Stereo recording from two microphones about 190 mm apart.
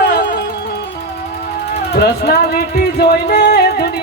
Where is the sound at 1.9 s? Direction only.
55° left (ahead or behind).